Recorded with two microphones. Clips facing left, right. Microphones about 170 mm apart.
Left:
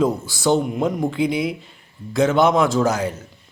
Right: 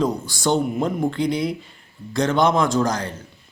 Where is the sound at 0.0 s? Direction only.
5° left (ahead or behind).